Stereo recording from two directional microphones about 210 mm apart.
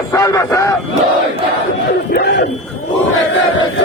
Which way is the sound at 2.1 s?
55° left (ahead or behind).